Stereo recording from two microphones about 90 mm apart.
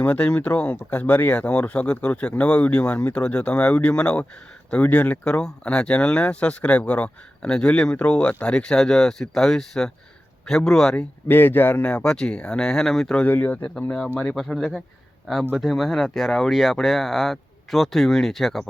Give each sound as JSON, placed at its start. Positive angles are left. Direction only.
{"t": 0.0, "sound": "speech", "side_deg": 15}
{"t": 11.3, "sound": "speech", "side_deg": 20}
{"t": 11.9, "sound": "speech", "side_deg": 10}
{"t": 13.2, "sound": "speech", "side_deg": 20}